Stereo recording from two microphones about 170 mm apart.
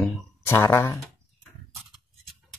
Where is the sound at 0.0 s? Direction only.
10° left (ahead or behind).